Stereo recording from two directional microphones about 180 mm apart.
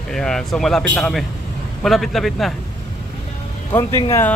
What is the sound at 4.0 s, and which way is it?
Speech, 15° left (ahead or behind).